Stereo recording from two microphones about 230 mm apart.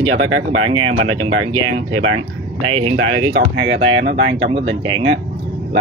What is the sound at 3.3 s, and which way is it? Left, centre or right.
Speech, right.